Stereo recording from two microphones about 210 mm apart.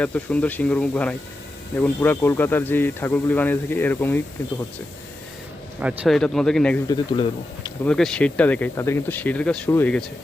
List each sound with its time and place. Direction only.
0.0 s speech: 5° left (ahead or behind)
5.8 s speech: 5° right (ahead or behind)
6.8 s speech: 20° left (ahead or behind)
7.9 s speech: 5° left (ahead or behind)